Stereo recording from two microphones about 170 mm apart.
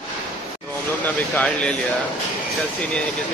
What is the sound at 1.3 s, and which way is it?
Speech, 10° left (ahead or behind).